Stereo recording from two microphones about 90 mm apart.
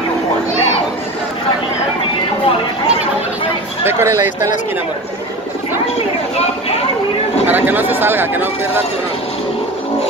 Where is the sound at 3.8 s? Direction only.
30° right (ahead or behind).